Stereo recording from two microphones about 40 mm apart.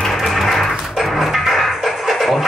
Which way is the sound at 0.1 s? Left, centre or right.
Centre.